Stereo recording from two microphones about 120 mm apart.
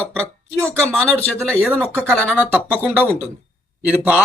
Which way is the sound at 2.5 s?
15° right (ahead or behind).